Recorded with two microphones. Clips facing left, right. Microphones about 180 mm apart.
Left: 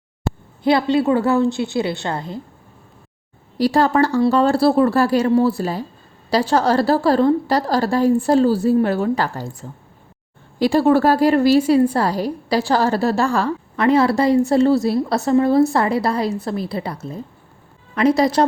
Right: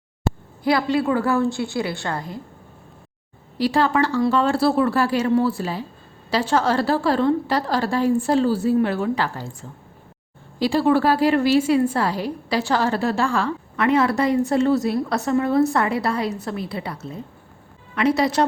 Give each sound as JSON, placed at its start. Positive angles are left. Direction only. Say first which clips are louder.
{"t": 0.6, "sound": "a woman's voice", "louder": "left 4 dB", "side_deg": 25}
{"t": 3.6, "sound": "a woman's voice", "louder": "left 4 dB", "side_deg": 40}
{"t": 18.2, "sound": "a woman's voice", "louder": "left 3 dB", "side_deg": 35}